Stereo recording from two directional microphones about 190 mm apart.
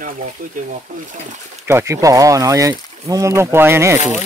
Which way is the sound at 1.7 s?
15° right (ahead or behind).